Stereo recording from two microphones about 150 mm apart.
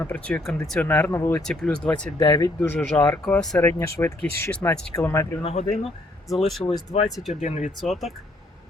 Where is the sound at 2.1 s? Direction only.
30° left (ahead or behind).